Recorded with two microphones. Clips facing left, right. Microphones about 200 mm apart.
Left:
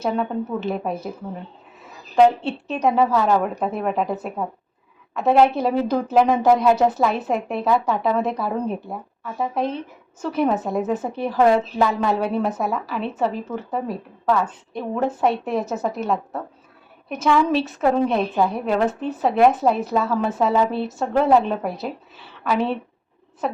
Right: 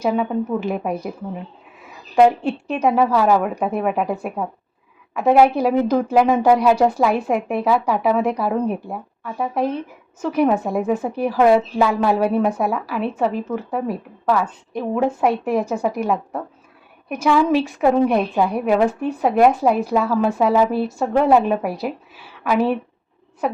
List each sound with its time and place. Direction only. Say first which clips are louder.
0.0 s a woman's voice: right 3 dB; 10° right (ahead or behind)
2.1 s a woman's voice: right 1 dB; 10° right (ahead or behind)